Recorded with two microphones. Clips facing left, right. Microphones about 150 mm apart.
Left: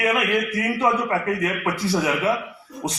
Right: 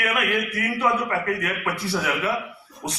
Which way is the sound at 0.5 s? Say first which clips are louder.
Left 2 dB; 20° left (ahead or behind).